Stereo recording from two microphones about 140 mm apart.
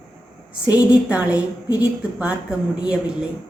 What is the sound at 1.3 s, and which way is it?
Speech, 30° left (ahead or behind).